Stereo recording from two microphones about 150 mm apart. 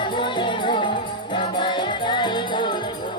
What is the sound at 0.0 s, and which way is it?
Music, 30° left (ahead or behind).